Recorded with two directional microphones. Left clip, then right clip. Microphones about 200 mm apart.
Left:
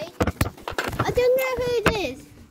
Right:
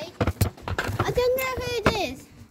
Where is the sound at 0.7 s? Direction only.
60° left (ahead or behind).